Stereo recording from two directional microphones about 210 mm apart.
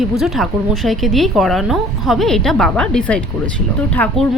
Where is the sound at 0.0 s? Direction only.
Centre (ahead or behind).